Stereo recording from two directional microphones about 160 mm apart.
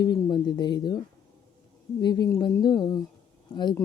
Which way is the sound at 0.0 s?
25° left (ahead or behind).